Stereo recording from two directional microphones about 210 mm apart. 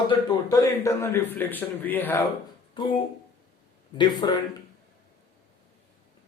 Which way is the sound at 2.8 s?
20° left (ahead or behind).